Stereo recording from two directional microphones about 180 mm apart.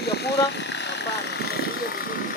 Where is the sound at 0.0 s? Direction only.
65° left (ahead or behind).